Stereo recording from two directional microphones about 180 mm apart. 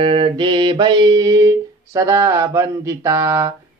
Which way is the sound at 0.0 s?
30° right (ahead or behind).